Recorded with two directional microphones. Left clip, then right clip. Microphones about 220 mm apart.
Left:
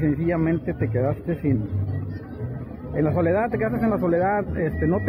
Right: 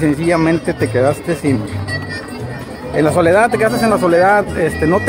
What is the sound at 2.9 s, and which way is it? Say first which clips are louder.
Speech: right 11 dB; 15° right (ahead or behind).